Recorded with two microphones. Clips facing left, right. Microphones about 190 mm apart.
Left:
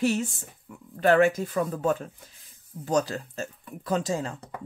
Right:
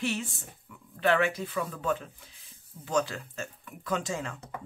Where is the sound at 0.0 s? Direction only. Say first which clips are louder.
Left 7 dB; 40° left (ahead or behind).